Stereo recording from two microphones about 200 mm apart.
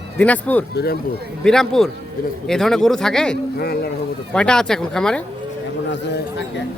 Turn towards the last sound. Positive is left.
turn(degrees=60)  # may be behind; listen again after turning